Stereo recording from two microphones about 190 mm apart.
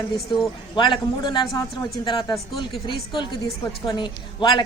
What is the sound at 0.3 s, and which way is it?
A woman's voice, 25° left (ahead or behind).